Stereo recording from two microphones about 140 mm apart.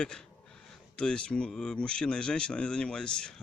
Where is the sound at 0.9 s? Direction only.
5° left (ahead or behind).